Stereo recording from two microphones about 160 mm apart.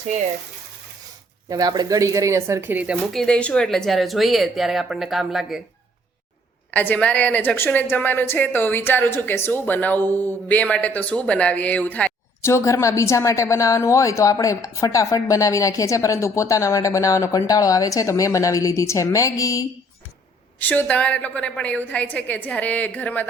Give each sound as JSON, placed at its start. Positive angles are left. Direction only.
{"t": 1.5, "sound": "speech", "side_deg": -25}
{"t": 2.9, "sound": "speech", "side_deg": 0}
{"t": 6.7, "sound": "a woman's voice", "side_deg": 10}
{"t": 20.6, "sound": "a woman's voice", "side_deg": 10}